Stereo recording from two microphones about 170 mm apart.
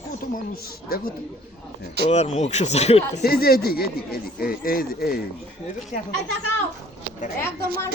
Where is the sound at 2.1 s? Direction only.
40° left (ahead or behind).